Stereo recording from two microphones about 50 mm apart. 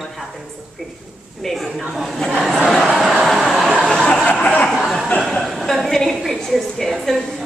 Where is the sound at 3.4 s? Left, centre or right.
Centre.